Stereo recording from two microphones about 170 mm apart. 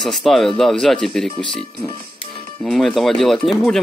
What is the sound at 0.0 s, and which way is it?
Speech, centre (ahead or behind).